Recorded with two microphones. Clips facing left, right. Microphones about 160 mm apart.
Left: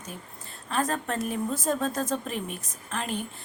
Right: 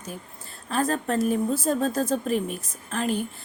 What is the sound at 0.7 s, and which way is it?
Speech, 35° right (ahead or behind).